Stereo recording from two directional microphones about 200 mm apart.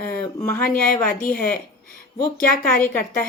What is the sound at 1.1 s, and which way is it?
Speech, 45° left (ahead or behind).